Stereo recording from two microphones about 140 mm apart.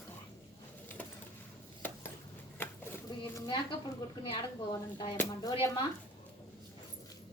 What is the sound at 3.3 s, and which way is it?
Speech, 35° left (ahead or behind).